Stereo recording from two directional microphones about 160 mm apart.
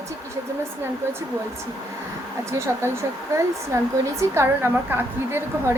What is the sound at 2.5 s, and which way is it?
Speech, 15° right (ahead or behind).